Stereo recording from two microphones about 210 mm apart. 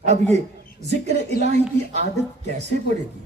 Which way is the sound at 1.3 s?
30° right (ahead or behind).